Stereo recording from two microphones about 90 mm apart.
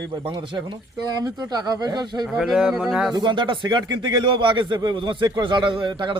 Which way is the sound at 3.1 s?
60° right (ahead or behind).